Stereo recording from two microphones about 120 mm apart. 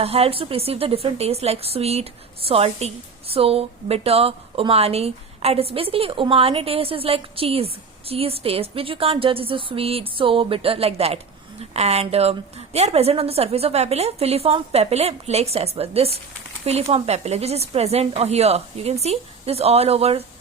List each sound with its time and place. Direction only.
0.0 s a woman's voice: 55° right (ahead or behind)